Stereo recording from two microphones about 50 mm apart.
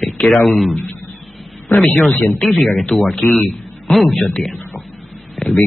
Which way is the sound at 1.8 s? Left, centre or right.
Centre.